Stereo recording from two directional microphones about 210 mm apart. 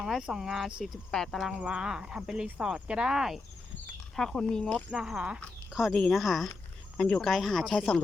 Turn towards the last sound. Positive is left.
turn(degrees=0)  # may be behind; listen again after turning